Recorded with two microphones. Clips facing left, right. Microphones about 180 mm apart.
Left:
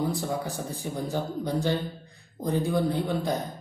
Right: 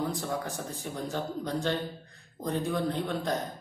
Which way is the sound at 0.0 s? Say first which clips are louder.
Left 3 dB; 10° left (ahead or behind).